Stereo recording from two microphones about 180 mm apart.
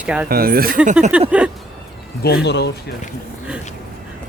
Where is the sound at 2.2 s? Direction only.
65° left (ahead or behind).